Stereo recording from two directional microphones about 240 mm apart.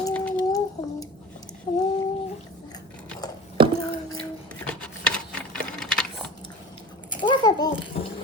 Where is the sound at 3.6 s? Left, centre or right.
Right.